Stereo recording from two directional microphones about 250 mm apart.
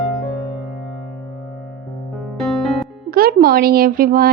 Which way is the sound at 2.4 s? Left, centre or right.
Centre.